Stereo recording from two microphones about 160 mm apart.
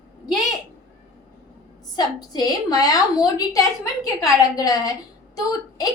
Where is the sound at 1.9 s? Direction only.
25° left (ahead or behind).